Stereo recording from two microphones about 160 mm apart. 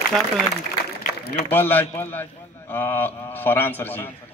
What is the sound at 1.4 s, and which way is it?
A man's voice, 15° left (ahead or behind).